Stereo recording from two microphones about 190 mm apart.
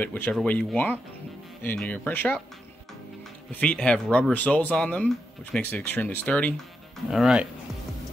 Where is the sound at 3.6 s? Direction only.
5° left (ahead or behind).